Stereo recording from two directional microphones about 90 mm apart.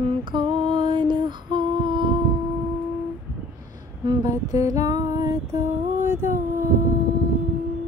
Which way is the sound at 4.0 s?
45° right (ahead or behind).